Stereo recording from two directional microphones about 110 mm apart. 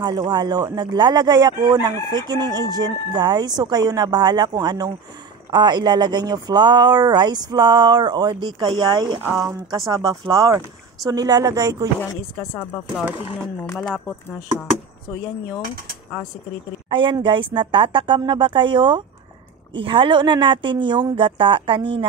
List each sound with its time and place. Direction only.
0.3 s speech: 40° right (ahead or behind)
10.0 s speech: 30° right (ahead or behind)
12.8 s speech: 5° right (ahead or behind)
16.9 s speech: 45° right (ahead or behind)